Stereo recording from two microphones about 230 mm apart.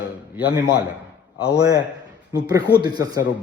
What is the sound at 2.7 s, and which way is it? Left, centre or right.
Speech, centre.